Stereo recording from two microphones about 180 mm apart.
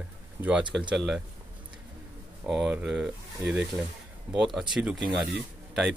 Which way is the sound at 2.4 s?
5° right (ahead or behind).